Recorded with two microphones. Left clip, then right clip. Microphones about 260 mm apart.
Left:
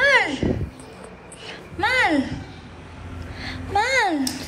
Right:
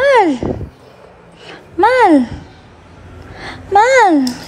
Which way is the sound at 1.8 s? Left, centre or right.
Right.